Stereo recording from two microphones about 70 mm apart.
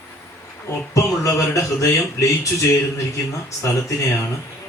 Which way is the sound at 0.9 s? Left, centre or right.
Left.